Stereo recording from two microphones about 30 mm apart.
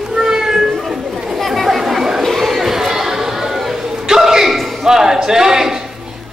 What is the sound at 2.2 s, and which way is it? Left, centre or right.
Chatter, centre.